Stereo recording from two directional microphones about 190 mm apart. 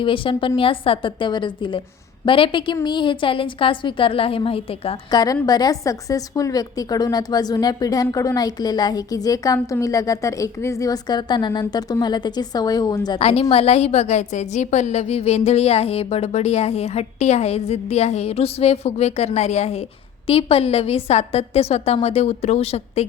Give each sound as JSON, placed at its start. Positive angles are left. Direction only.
{"t": 0.0, "sound": "a woman's voice", "side_deg": 25}
{"t": 13.1, "sound": "a woman's voice", "side_deg": 30}